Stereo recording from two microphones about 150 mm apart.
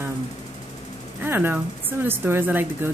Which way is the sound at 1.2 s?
15° right (ahead or behind).